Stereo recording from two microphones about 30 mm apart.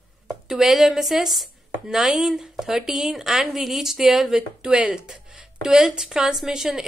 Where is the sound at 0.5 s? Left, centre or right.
Centre.